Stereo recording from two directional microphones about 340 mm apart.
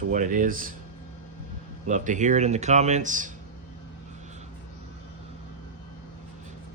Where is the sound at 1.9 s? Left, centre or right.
Right.